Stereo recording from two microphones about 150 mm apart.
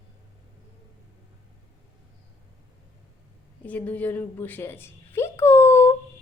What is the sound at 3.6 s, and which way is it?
A woman's voice, 10° left (ahead or behind).